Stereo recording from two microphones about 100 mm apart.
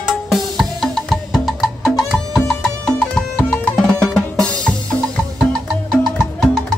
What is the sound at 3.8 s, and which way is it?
Music, 5° left (ahead or behind).